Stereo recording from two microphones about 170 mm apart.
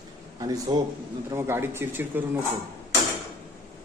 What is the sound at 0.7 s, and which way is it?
Speech, 30° right (ahead or behind).